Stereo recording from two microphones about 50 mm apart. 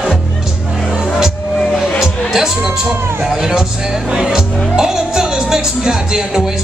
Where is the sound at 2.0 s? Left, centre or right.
Centre.